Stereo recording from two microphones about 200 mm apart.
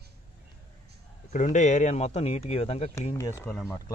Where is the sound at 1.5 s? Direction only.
35° left (ahead or behind).